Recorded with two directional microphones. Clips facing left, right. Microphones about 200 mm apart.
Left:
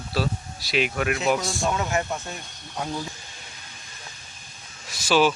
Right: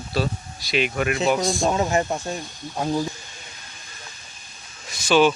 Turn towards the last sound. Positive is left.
turn(degrees=5)  # may be behind; listen again after turning